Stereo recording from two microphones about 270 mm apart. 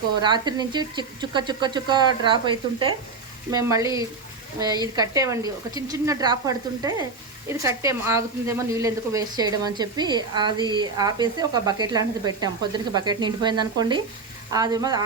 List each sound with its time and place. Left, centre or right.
0.2 s speech: centre